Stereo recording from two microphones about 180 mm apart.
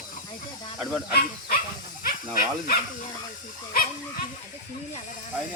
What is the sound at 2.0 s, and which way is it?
Speech, 50° left (ahead or behind).